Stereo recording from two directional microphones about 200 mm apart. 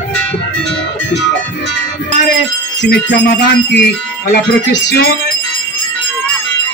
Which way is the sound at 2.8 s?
55° left (ahead or behind).